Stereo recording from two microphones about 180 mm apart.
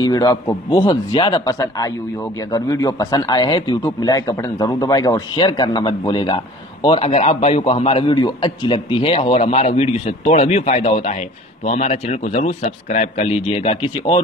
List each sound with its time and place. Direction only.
0.0 s a man's voice: 20° left (ahead or behind)